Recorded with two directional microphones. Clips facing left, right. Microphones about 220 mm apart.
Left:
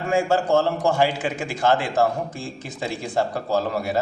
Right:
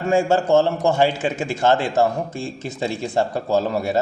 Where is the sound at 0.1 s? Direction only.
25° right (ahead or behind).